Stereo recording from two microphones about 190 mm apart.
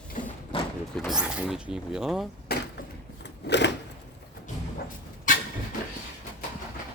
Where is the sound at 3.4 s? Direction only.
65° left (ahead or behind).